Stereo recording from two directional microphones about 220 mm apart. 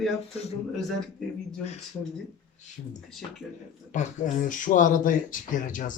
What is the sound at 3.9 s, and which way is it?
Speech, 35° left (ahead or behind).